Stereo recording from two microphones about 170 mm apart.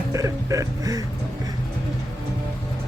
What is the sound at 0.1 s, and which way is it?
Music, 20° right (ahead or behind).